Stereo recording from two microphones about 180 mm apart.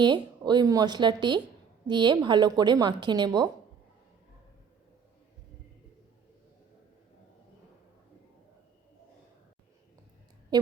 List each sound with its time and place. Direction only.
0.0 s a woman's voice: 25° right (ahead or behind)